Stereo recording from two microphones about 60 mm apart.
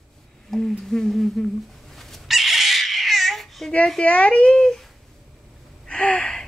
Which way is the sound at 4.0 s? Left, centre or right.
Left.